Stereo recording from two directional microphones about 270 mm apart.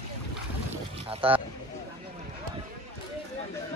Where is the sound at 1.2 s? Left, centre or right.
Centre.